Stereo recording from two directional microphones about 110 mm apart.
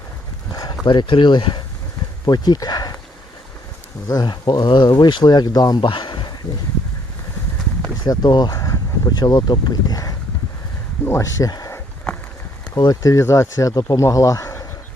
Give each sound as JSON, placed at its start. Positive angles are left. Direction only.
{"t": 0.5, "sound": "a sound", "side_deg": 40}
{"t": 0.9, "sound": "speech", "side_deg": 50}
{"t": 4.1, "sound": "speech", "side_deg": 40}
{"t": 8.0, "sound": "speech", "side_deg": 40}